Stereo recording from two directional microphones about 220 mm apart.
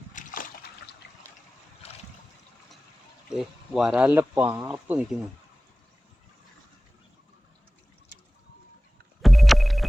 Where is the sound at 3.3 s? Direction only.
Centre (ahead or behind).